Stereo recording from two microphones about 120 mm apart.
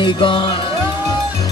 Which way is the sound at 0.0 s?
45° left (ahead or behind).